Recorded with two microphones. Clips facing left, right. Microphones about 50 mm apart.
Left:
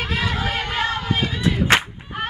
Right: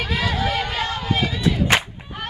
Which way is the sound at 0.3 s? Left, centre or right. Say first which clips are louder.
Right 1 dB; left.